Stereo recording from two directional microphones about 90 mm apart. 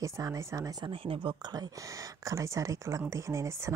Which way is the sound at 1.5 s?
40° right (ahead or behind).